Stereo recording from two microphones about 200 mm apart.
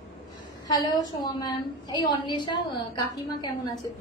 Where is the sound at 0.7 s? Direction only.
20° left (ahead or behind).